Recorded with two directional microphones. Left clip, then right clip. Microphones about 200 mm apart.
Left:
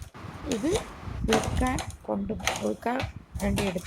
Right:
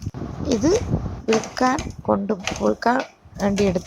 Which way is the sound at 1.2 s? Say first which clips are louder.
Right 4 dB; centre (ahead or behind).